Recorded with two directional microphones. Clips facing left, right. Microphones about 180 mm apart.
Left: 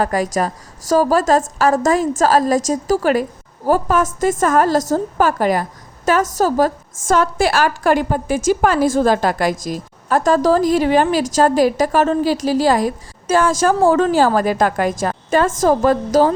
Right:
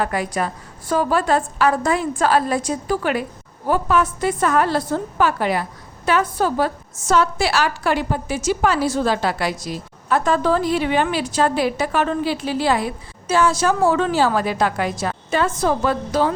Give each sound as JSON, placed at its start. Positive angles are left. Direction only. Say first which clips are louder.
{"t": 0.0, "sound": "a woman's voice", "louder": "left 4 dB", "side_deg": 40}